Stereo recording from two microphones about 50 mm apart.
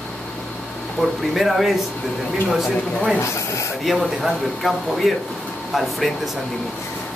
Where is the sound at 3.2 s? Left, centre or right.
Left.